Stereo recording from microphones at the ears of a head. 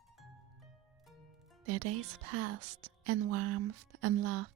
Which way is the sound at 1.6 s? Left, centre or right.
Right.